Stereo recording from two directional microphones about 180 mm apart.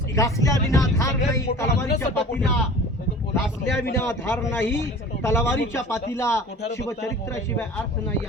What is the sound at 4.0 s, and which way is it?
Speech, 15° left (ahead or behind).